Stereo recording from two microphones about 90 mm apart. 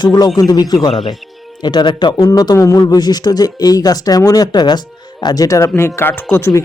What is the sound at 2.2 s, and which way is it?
Speech, 45° left (ahead or behind).